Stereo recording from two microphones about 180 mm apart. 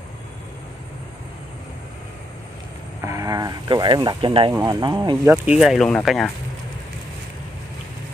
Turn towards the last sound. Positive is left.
turn(degrees=0)  # may be behind; listen again after turning